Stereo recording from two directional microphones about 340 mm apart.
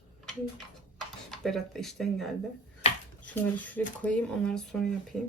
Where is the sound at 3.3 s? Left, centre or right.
Centre.